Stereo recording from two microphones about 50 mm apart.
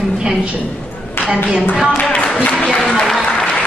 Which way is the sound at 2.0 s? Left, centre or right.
Left.